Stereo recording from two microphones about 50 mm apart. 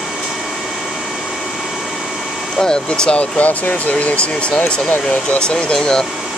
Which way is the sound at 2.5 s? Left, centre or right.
Centre.